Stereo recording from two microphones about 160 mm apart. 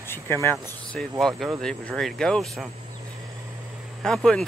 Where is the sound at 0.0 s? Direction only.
15° left (ahead or behind).